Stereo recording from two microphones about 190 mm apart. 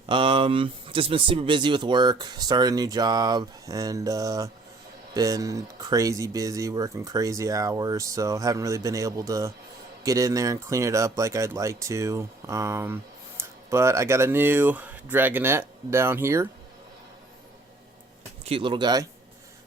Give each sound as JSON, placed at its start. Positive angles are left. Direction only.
{"t": 0.1, "sound": "speech", "side_deg": -25}
{"t": 18.4, "sound": "speech", "side_deg": -25}